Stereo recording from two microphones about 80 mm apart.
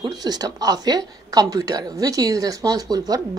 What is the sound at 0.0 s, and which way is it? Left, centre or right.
Speech, right.